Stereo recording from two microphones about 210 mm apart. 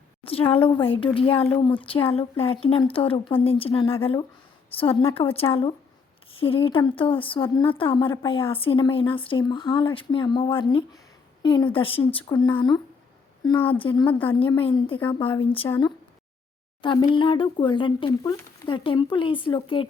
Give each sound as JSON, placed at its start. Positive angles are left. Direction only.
{"t": 0.3, "sound": "speech", "side_deg": 25}
{"t": 16.8, "sound": "speech", "side_deg": 25}